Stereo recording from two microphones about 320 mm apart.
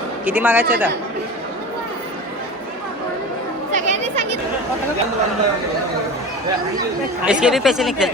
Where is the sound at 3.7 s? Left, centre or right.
Right.